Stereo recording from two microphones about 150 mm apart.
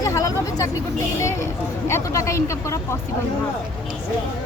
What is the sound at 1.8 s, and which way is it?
Speech, 20° left (ahead or behind).